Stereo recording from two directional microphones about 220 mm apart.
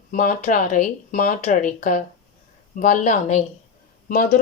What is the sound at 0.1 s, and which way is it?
A woman's voice, 35° left (ahead or behind).